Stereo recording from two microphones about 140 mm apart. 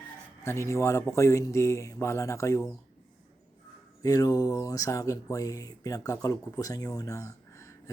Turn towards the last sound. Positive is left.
turn(degrees=20)  # may be behind; listen again after turning